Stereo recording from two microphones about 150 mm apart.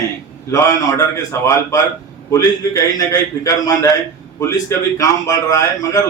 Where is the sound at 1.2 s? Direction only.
20° left (ahead or behind).